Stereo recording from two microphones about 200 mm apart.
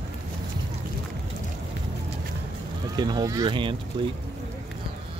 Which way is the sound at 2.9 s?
20° right (ahead or behind).